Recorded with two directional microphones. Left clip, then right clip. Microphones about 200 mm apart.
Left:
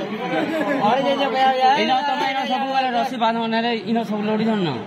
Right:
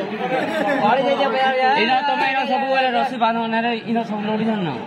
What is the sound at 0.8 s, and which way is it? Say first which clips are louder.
Speech: right 1 dB; 40° left (ahead or behind).